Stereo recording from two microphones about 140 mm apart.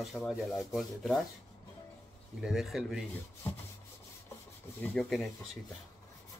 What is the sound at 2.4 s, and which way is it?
Speech, centre (ahead or behind).